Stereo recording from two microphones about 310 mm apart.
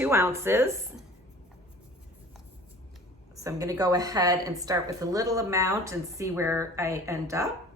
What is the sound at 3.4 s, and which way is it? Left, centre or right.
Speech, centre.